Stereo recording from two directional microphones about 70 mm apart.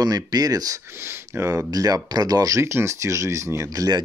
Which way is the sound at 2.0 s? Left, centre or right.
Right.